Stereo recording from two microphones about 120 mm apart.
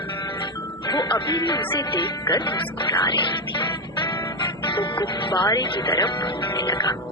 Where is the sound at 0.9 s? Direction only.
40° left (ahead or behind).